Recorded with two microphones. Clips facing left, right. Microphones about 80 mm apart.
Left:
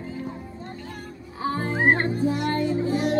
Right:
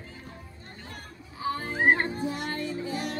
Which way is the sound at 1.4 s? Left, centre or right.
Left.